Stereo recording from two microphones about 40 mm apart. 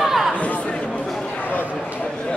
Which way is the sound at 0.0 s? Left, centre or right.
Centre.